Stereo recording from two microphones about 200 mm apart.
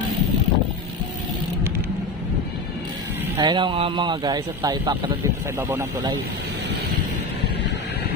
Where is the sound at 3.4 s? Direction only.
20° right (ahead or behind).